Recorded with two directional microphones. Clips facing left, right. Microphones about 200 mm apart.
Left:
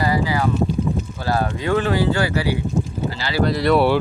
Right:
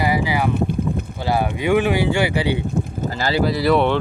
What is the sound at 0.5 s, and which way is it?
Boat, 55° right (ahead or behind).